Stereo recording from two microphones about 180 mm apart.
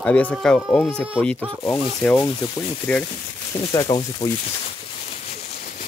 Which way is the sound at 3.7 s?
20° left (ahead or behind).